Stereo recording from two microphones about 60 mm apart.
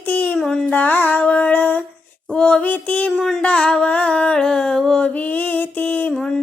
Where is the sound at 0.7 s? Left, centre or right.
Left.